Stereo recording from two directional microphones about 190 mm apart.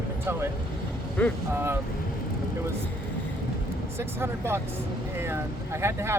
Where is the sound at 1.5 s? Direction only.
10° right (ahead or behind).